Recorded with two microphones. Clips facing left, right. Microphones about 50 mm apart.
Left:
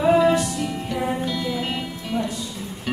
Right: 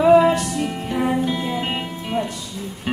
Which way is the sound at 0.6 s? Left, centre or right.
Right.